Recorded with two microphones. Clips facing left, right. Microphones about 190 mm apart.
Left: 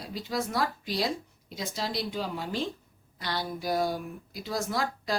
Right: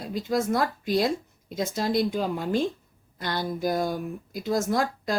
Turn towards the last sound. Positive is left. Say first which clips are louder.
# right 5 dB
turn(degrees=-50)  # may be behind; listen again after turning